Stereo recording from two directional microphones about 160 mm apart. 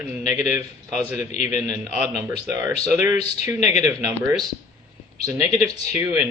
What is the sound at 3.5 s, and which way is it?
Speech, 45° left (ahead or behind).